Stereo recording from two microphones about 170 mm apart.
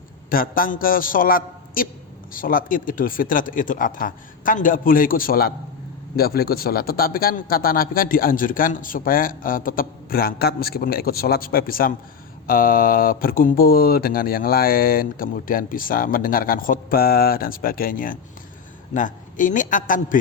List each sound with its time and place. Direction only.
0.3 s a man's voice: 55° left (ahead or behind)